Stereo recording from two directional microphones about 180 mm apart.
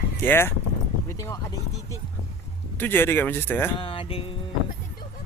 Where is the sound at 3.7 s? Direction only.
30° left (ahead or behind).